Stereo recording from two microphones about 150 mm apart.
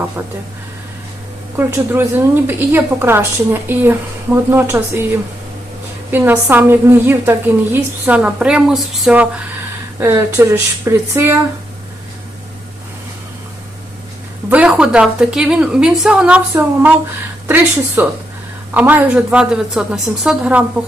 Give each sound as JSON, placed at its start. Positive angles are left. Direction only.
{"t": 1.5, "sound": "a woman's voice", "side_deg": -15}
{"t": 6.1, "sound": "a woman's voice", "side_deg": -15}
{"t": 10.0, "sound": "a woman's voice", "side_deg": -15}
{"t": 14.5, "sound": "a woman's voice", "side_deg": -5}